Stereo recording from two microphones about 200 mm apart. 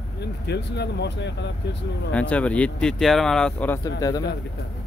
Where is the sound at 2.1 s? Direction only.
5° left (ahead or behind).